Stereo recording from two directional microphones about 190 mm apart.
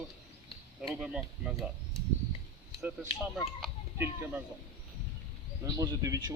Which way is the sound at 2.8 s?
10° right (ahead or behind).